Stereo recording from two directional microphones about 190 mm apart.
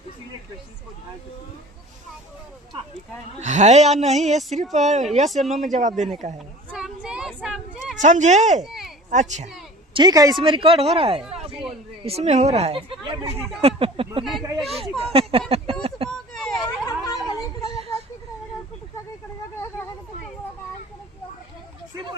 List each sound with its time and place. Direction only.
3.4 s a woman's voice: 40° right (ahead or behind)
5.3 s speech: centre (ahead or behind)
5.6 s a woman's voice: 40° right (ahead or behind)
6.7 s child singing: 5° right (ahead or behind)
8.0 s a woman's voice: 40° right (ahead or behind)
8.6 s a sound: centre (ahead or behind)
9.0 s a child's voice: 40° right (ahead or behind)
9.9 s a woman's voice: 20° right (ahead or behind)
11.3 s a sound: 30° right (ahead or behind)
12.0 s a woman's voice: 35° right (ahead or behind)
14.6 s speech: centre (ahead or behind)
15.1 s a sound: 30° right (ahead or behind)
16.0 s vehicle: centre (ahead or behind)
16.8 s a sound: 20° left (ahead or behind)